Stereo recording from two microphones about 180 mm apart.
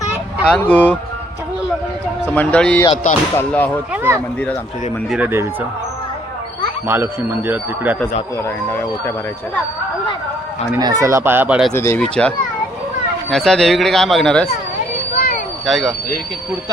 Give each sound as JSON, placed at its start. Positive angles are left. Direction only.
{"t": 0.4, "sound": "speech", "side_deg": 5}
{"t": 2.2, "sound": "speech", "side_deg": 10}
{"t": 2.9, "sound": "speech", "side_deg": 40}
{"t": 3.3, "sound": "speech", "side_deg": 10}
{"t": 3.9, "sound": "speech", "side_deg": -10}
{"t": 6.8, "sound": "speech", "side_deg": -10}
{"t": 8.4, "sound": "speech", "side_deg": 15}
{"t": 10.8, "sound": "speech", "side_deg": -20}
{"t": 11.7, "sound": "speech", "side_deg": 15}
{"t": 13.3, "sound": "speech", "side_deg": 0}
{"t": 15.6, "sound": "speech", "side_deg": 0}